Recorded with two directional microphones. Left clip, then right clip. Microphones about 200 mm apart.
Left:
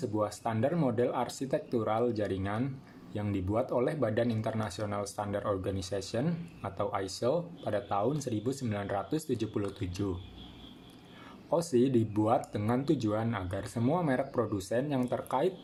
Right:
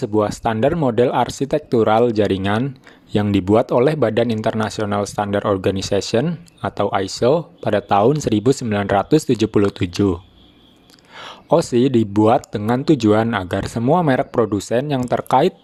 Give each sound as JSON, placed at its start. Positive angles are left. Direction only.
{"t": 0.0, "sound": "speech", "side_deg": -40}
{"t": 11.2, "sound": "speech", "side_deg": -45}